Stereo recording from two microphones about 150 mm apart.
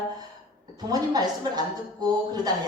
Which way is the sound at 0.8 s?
25° right (ahead or behind).